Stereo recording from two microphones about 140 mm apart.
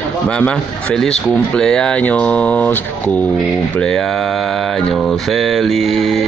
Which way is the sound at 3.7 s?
5° left (ahead or behind).